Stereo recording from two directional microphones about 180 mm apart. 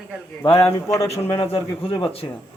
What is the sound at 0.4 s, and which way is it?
Speech, 30° left (ahead or behind).